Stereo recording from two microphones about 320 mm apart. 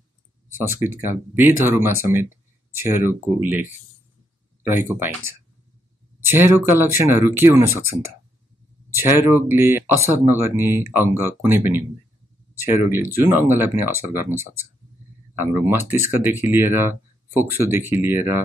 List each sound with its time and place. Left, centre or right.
1.1 s speech: centre